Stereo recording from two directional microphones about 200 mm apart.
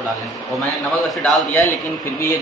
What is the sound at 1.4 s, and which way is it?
Speech, 10° left (ahead or behind).